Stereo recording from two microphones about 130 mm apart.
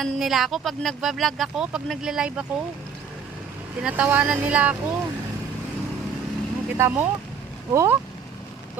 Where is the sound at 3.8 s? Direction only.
10° right (ahead or behind).